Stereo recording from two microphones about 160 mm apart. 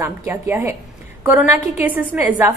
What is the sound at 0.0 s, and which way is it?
A woman's voice, 15° right (ahead or behind).